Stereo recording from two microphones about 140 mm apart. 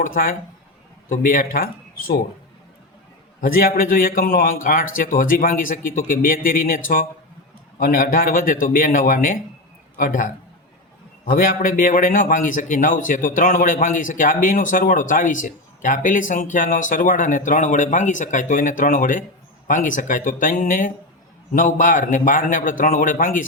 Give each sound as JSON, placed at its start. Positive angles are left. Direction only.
{"t": 0.0, "sound": "a man's voice", "side_deg": 90}
{"t": 3.4, "sound": "a man's voice", "side_deg": 90}